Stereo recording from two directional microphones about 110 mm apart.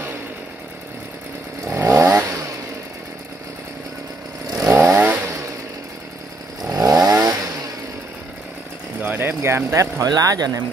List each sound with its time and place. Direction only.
1.6 s chainsaw: 25° right (ahead or behind)
4.5 s chainsaw: 30° right (ahead or behind)
4.7 s chainsaw: 20° right (ahead or behind)
6.7 s chainsaw: 30° right (ahead or behind)
9.0 s speech: 15° right (ahead or behind); by 10.6 s 35° right (ahead or behind)